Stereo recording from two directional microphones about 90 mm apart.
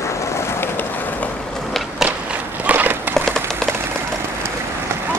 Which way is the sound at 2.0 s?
10° right (ahead or behind).